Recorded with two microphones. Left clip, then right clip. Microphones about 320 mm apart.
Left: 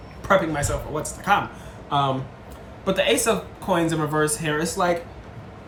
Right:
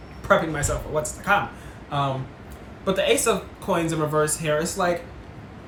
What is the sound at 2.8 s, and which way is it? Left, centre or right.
Speech, centre.